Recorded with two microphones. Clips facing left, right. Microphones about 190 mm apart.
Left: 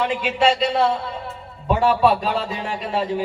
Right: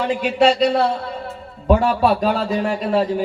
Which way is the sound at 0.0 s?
45° right (ahead or behind).